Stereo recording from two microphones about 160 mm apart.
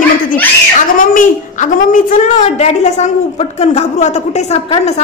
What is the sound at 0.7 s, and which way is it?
A woman's voice, 55° left (ahead or behind).